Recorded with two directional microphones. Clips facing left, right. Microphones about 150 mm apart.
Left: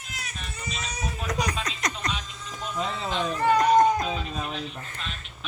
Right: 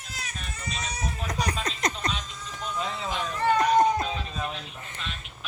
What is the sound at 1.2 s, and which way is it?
Baby laughter, 30° right (ahead or behind).